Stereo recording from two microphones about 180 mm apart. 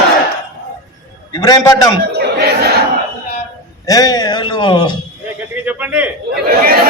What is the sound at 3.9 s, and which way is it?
A man's voice, 20° left (ahead or behind).